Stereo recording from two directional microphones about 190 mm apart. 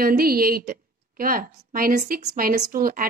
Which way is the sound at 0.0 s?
50° right (ahead or behind).